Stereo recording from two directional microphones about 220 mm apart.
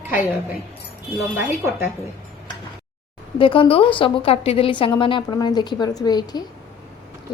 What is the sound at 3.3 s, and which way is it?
A woman's voice, 25° left (ahead or behind).